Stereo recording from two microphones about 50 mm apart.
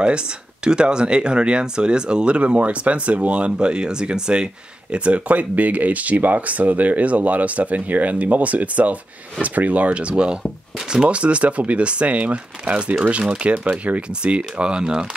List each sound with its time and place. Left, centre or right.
0.7 s speech: centre